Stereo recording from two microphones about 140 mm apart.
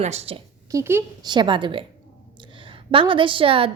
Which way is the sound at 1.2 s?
30° right (ahead or behind).